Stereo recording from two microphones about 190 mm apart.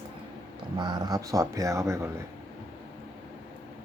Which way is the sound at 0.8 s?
20° right (ahead or behind).